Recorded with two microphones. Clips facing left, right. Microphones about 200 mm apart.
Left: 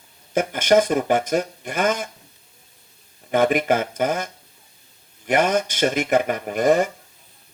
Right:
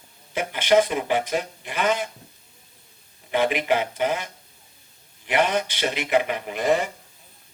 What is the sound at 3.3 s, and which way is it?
Speech, 45° left (ahead or behind).